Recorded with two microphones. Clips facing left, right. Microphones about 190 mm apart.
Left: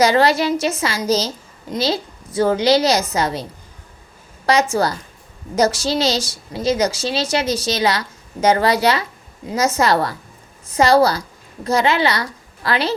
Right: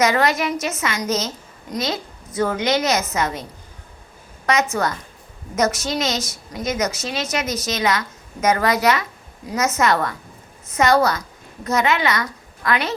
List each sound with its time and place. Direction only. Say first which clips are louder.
0.0 s a woman's voice: left 4 dB; 30° left (ahead or behind)
4.4 s a woman's voice: left 3 dB; 30° left (ahead or behind)